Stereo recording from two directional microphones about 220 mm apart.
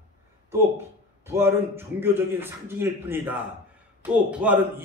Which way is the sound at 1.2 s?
10° right (ahead or behind).